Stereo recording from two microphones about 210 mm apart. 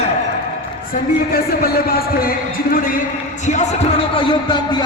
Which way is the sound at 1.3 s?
45° left (ahead or behind).